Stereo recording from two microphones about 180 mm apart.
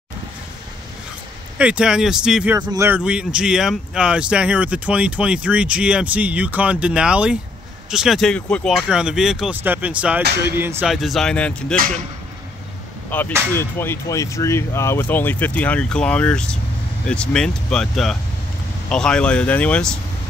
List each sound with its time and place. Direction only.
1.6 s speech: 5° right (ahead or behind)
2.6 s a man's voice: 20° right (ahead or behind)
2.9 s speech: 5° right (ahead or behind)
10.9 s speech: centre (ahead or behind)
13.1 s speech: 10° left (ahead or behind)